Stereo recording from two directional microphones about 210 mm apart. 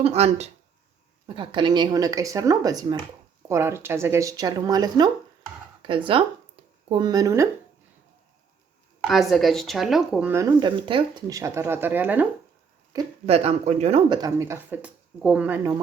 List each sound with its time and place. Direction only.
0.0 s speech: 30° right (ahead or behind)
9.0 s speech: centre (ahead or behind)
13.2 s speech: 30° right (ahead or behind)
14.2 s speech: 15° right (ahead or behind)